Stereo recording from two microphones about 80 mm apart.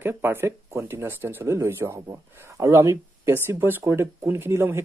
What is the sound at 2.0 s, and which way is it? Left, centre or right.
Speech, right.